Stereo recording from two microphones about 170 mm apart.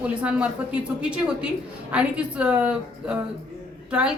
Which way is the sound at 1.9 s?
5° right (ahead or behind).